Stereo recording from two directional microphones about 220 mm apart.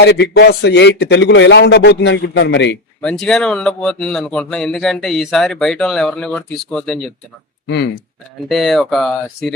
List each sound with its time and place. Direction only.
0.0 s a man's voice: 50° left (ahead or behind)
3.0 s speech: 5° left (ahead or behind)
8.4 s speech: centre (ahead or behind)